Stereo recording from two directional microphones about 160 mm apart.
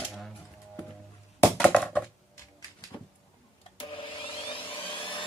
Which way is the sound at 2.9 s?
25° left (ahead or behind).